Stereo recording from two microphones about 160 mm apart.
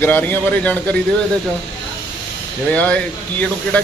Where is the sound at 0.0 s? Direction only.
10° left (ahead or behind).